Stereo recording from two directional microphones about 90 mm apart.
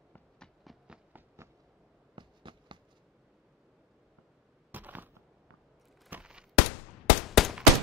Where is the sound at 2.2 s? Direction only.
60° right (ahead or behind).